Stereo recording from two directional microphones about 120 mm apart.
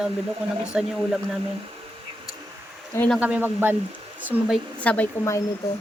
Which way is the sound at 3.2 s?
10° right (ahead or behind).